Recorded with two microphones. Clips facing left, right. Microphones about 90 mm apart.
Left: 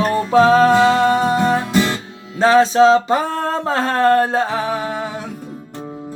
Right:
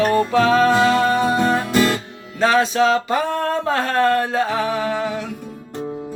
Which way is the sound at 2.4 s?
25° left (ahead or behind).